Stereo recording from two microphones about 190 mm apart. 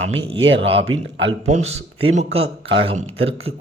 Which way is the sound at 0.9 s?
90° right.